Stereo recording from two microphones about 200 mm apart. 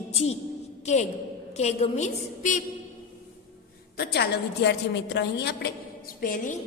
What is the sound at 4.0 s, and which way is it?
A woman's voice, 55° left (ahead or behind).